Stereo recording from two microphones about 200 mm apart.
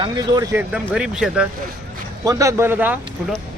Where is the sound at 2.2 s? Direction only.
15° right (ahead or behind).